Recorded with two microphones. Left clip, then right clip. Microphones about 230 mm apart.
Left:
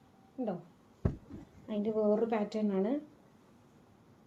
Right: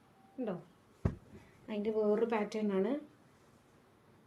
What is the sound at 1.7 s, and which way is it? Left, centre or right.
Speech, right.